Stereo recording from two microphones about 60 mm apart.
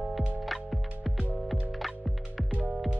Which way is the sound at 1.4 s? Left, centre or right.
Centre.